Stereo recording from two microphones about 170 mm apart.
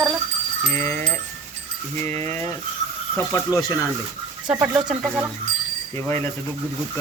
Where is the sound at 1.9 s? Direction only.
40° right (ahead or behind).